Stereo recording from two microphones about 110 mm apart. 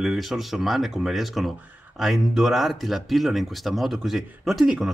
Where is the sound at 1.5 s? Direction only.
15° right (ahead or behind).